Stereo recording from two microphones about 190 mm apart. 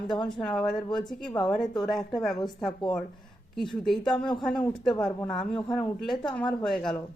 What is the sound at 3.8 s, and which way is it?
A woman's voice, centre (ahead or behind).